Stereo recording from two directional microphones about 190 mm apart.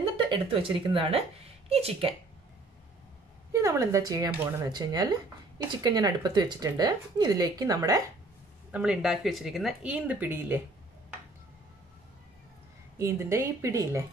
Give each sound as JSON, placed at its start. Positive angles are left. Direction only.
{"t": 0.2, "sound": "a woman's voice", "side_deg": -25}
{"t": 3.5, "sound": "speech", "side_deg": -15}
{"t": 8.7, "sound": "speech", "side_deg": -5}
{"t": 13.0, "sound": "speech", "side_deg": -15}